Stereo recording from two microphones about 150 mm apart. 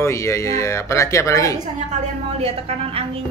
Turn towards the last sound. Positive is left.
turn(degrees=-40)  # may be behind; listen again after turning